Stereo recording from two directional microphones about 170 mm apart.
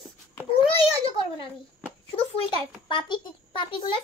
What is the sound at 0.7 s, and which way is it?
A child's voice, 35° left (ahead or behind).